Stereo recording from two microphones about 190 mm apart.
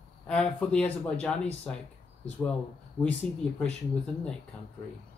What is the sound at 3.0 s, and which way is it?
Speech, 5° left (ahead or behind).